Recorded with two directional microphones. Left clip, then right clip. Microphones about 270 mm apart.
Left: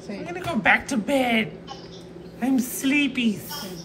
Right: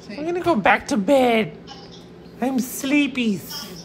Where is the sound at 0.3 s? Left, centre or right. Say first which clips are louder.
Right 3 dB; centre.